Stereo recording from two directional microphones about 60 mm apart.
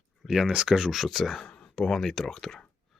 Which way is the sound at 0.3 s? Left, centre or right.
Centre.